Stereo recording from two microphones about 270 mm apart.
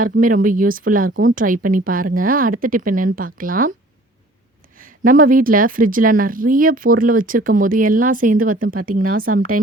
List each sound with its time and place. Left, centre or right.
0.0 s speech: right
4.8 s speech: right
9.2 s a woman's voice: right